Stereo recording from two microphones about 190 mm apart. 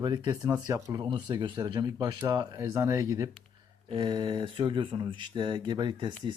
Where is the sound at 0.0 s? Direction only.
20° right (ahead or behind).